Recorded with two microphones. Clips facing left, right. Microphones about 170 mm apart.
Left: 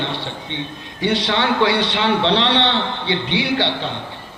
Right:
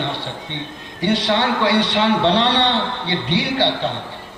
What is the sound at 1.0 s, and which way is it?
A man's voice, 45° right (ahead or behind).